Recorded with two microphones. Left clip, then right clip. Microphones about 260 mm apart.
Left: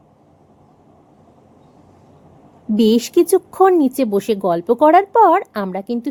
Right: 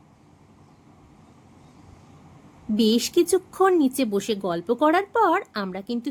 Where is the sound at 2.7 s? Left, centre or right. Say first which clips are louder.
Left 7 dB; centre.